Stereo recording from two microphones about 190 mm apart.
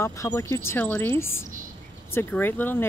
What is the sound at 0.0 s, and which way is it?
Speech, 15° left (ahead or behind).